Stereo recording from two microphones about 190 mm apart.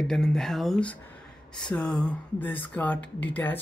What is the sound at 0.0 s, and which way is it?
Speech, 5° left (ahead or behind).